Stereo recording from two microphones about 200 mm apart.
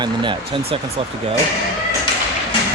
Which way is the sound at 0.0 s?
25° right (ahead or behind).